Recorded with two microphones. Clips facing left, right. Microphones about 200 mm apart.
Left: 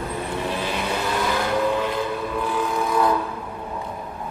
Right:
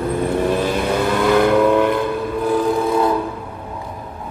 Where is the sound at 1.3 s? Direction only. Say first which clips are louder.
Right 10 dB; 60° right (ahead or behind).